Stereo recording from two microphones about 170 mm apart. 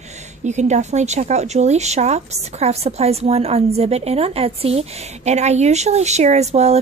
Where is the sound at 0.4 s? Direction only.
45° right (ahead or behind).